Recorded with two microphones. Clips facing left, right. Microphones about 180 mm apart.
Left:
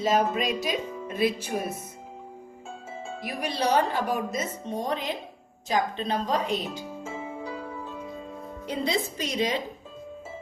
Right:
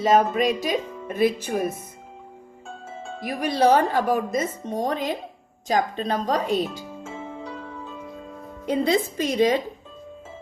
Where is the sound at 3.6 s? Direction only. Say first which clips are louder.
Right 6 dB; 50° right (ahead or behind).